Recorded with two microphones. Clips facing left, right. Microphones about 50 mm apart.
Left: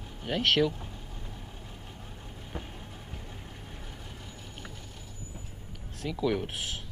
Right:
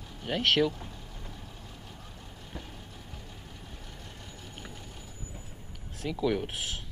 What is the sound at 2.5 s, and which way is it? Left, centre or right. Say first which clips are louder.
Vehicle: left 3 dB; left.